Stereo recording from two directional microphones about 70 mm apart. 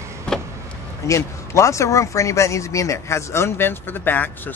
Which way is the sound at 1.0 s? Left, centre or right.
Left.